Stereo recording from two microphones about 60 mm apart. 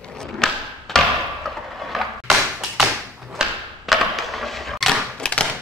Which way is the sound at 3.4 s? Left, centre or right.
Centre.